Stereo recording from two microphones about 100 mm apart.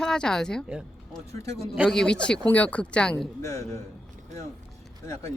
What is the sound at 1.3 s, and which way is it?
Speech, 30° left (ahead or behind).